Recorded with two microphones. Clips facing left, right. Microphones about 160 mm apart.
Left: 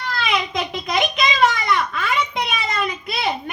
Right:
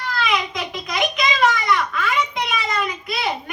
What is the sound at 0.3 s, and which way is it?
Speech, 25° left (ahead or behind).